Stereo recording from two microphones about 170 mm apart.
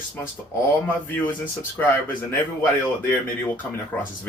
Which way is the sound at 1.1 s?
10° left (ahead or behind).